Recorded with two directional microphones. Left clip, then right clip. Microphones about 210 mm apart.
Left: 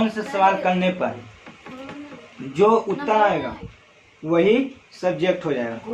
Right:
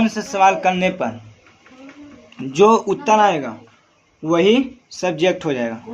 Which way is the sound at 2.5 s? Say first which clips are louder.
Right 4 dB; 45° right (ahead or behind).